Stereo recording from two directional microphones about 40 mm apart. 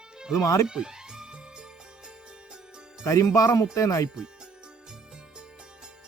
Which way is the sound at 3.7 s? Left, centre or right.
Centre.